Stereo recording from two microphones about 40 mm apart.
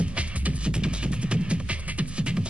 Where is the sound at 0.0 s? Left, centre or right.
Right.